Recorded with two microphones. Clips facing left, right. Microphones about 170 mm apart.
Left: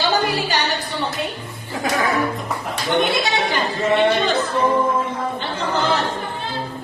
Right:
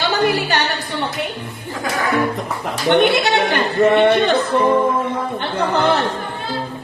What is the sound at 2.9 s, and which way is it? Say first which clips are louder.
Speech: right 5 dB; 65° right (ahead or behind).